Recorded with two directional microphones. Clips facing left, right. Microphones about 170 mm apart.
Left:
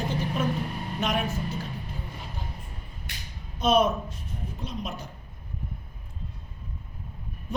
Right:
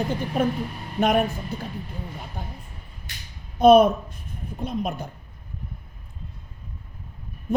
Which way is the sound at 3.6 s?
55° right (ahead or behind).